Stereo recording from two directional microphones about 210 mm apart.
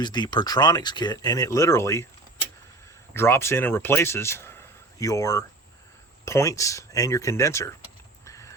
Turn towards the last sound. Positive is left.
turn(degrees=15)  # may be behind; listen again after turning